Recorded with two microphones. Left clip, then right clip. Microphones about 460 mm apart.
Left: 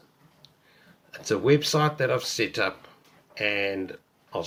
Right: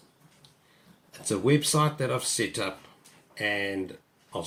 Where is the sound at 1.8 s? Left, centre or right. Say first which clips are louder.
Left 3 dB; centre.